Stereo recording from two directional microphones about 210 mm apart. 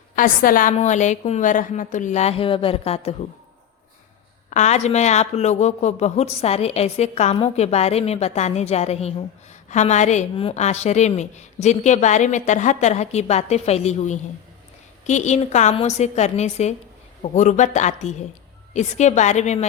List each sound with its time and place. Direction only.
0.2 s speech: 40° left (ahead or behind)
4.4 s speech: 35° left (ahead or behind)